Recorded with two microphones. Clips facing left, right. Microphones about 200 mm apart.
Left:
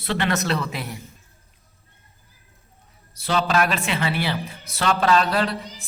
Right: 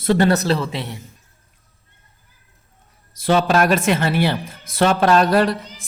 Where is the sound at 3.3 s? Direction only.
45° right (ahead or behind).